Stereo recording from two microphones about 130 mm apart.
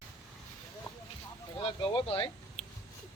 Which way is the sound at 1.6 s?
40° left (ahead or behind).